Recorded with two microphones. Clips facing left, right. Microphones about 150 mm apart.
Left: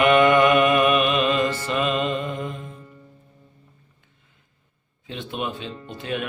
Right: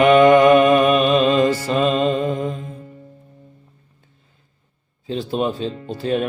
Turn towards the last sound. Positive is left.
turn(degrees=-35)  # may be behind; listen again after turning